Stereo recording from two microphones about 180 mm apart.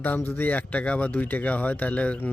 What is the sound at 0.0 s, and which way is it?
A man's voice, 10° left (ahead or behind).